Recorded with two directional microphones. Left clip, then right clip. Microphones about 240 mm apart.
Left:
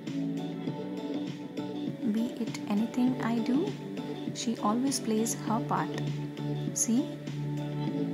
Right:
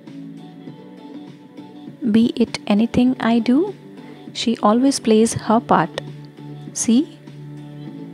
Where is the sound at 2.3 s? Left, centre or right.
Right.